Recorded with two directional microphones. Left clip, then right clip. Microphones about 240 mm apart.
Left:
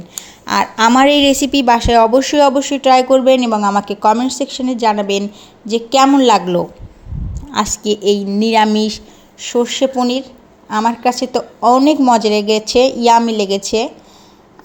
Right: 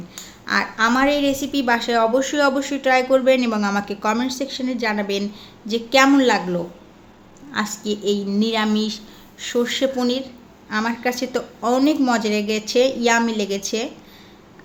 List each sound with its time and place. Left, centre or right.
0.2 s a woman's voice: left
3.3 s speech: centre
3.8 s a woman's voice: centre